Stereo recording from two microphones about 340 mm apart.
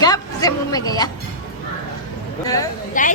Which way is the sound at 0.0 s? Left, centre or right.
Centre.